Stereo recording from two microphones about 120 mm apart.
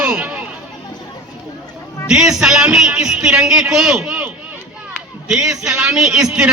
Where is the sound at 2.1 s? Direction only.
5° right (ahead or behind).